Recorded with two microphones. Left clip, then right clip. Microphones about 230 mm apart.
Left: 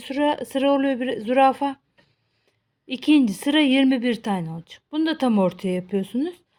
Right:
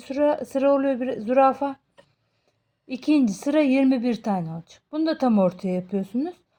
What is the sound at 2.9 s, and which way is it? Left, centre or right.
A woman's voice, left.